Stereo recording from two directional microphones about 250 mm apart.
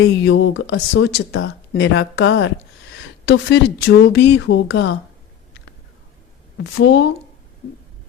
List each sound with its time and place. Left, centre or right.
0.0 s speech: left
6.7 s a woman's voice: left